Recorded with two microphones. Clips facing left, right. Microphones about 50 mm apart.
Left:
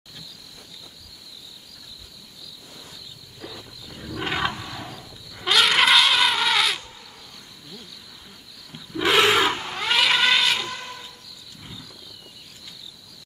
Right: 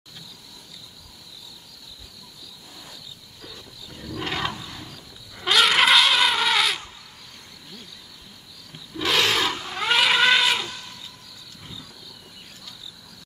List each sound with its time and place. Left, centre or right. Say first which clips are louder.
4.1 s roar: left 2 dB; centre
4.6 s wild animals: left 3 dB; left
5.3 s a sound: even; centre
8.9 s wild animals: left 4 dB; centre
9.8 s cat: right 2 dB; centre
10.7 s vehicle: left 5 dB; left